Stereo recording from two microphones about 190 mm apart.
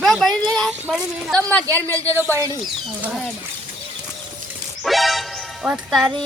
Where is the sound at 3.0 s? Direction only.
5° right (ahead or behind).